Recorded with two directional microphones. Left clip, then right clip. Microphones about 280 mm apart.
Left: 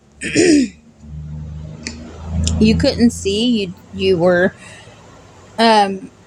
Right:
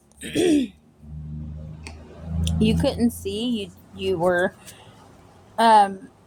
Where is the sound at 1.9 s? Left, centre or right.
Right.